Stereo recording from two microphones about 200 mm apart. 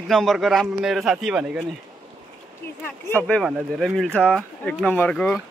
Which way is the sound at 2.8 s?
10° left (ahead or behind).